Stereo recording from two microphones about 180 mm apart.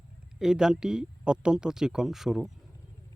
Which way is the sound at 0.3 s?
5° right (ahead or behind).